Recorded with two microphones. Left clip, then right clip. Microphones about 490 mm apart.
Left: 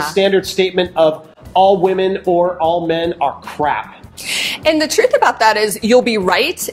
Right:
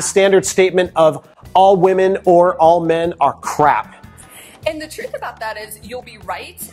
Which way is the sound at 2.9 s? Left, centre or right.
Right.